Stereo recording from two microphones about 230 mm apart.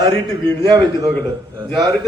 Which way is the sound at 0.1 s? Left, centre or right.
Right.